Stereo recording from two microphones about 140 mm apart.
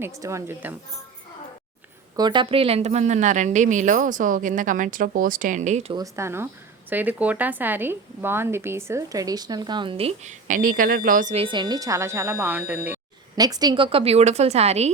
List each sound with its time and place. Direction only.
0.2 s speech: 20° right (ahead or behind)
2.1 s a woman's voice: 30° right (ahead or behind); by 5.8 s 60° right (ahead or behind)
5.9 s speech: 25° right (ahead or behind); by 10.3 s 45° right (ahead or behind)
10.5 s speech: 80° right
11.3 s speech: 35° right (ahead or behind); by 13.0 s 10° right (ahead or behind)
13.3 s a woman's voice: 30° right (ahead or behind); by 14.9 s 50° right (ahead or behind)